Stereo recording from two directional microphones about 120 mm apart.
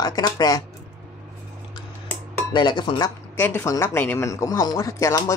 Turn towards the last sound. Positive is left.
turn(degrees=25)  # may be behind; listen again after turning